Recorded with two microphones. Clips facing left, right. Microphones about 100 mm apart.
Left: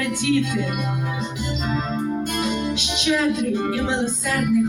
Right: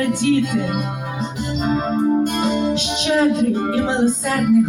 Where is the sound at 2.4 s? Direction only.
40° right (ahead or behind).